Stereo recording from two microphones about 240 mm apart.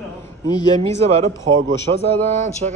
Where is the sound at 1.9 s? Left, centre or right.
Right.